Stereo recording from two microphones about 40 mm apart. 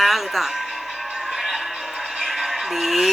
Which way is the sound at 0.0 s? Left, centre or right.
Centre.